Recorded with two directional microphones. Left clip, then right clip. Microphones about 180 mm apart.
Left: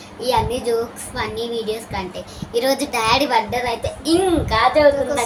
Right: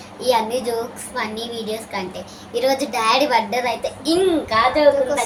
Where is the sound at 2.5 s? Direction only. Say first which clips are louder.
Even; 25° left (ahead or behind).